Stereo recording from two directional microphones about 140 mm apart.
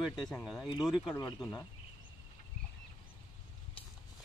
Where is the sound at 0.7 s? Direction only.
30° left (ahead or behind).